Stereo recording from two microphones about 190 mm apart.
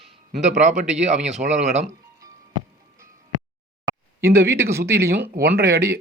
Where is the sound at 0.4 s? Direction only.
40° right (ahead or behind).